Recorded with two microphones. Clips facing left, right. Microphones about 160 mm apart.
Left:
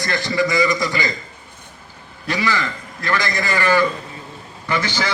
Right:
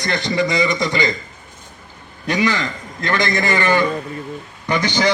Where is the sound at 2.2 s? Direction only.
20° right (ahead or behind).